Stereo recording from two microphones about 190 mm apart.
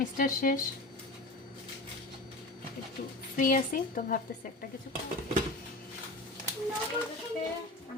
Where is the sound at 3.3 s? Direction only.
45° left (ahead or behind).